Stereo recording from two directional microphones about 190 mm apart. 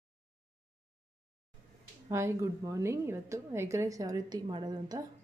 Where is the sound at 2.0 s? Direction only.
15° right (ahead or behind).